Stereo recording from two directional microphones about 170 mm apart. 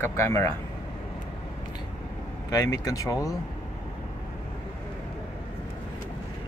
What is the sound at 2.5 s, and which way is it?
Speech, 20° left (ahead or behind).